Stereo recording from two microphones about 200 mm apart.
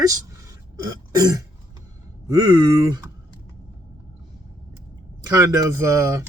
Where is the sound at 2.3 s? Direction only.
20° right (ahead or behind).